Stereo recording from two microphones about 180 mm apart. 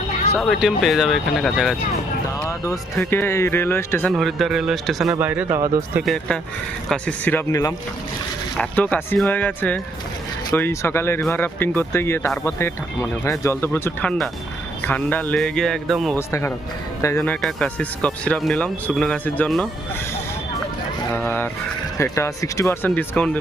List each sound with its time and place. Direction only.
0.3 s speech: centre (ahead or behind)
2.5 s speech: 15° left (ahead or behind)
4.1 s speech: centre (ahead or behind); by 6.0 s 20° right (ahead or behind)
6.0 s speech: 5° left (ahead or behind)
16.1 s speech: 15° left (ahead or behind)
17.2 s speech: 5° left (ahead or behind)
21.1 s speech: 10° left (ahead or behind)